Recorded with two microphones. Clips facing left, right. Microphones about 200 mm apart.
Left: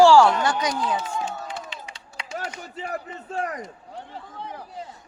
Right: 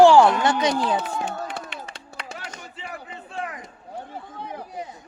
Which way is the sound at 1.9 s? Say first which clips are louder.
Left 2 dB; 55° right (ahead or behind).